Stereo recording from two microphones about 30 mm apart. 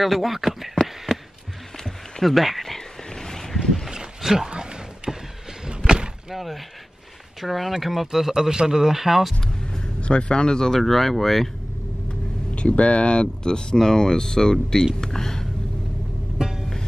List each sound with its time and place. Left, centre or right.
0.0 s speech: centre
0.7 s a sound: centre
2.2 s a sound: centre
3.3 s boat: centre
4.2 s speech: centre
4.5 s a sound: right
6.3 s speech: centre
8.3 s speech: right
9.9 s speech: left
10.8 s speech: centre
12.5 s speech: left; by 15.4 s centre
16.3 s music: centre